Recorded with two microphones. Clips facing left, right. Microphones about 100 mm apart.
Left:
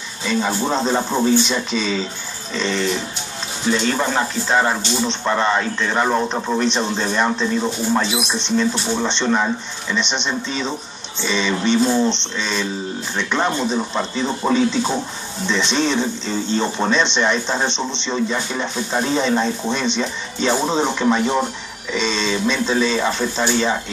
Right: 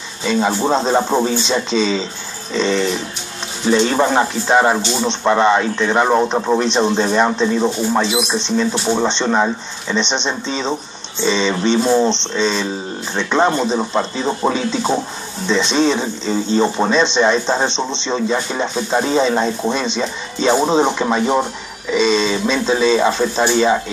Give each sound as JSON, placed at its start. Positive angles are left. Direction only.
{"t": 0.3, "sound": "speech", "side_deg": -20}